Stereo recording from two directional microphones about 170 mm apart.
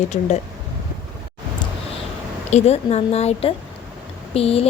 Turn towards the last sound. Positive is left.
turn(degrees=35)  # may be behind; listen again after turning